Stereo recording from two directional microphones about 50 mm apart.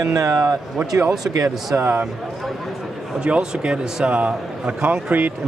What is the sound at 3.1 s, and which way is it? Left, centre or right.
A man's voice, right.